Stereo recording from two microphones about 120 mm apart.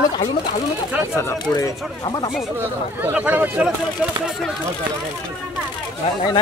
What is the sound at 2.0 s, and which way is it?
Speech, 40° left (ahead or behind).